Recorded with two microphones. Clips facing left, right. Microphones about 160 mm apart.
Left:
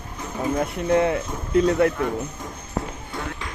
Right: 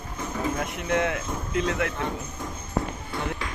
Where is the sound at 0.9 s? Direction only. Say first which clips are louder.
Left 5 dB; 35° left (ahead or behind).